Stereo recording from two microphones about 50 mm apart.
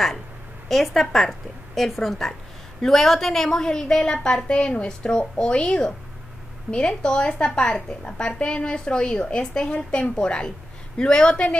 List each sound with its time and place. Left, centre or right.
0.7 s a woman's voice: centre